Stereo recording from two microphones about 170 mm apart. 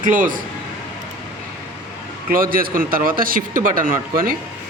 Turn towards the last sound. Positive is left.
turn(degrees=-60)  # may be behind; listen again after turning